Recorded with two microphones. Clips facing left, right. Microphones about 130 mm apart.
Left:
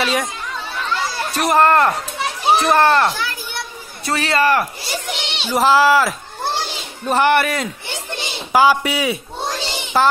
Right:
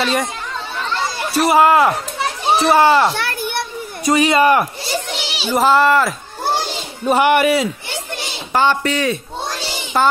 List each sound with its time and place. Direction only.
0.0 s a child's voice: centre (ahead or behind)
1.3 s a child's voice: 5° right (ahead or behind)
3.2 s children playing: 60° right (ahead or behind)
4.0 s speech: 15° right (ahead or behind)
4.9 s a child's voice: 5° right (ahead or behind)
7.1 s speech: 10° right (ahead or behind)
8.5 s a child's voice: 10° left (ahead or behind)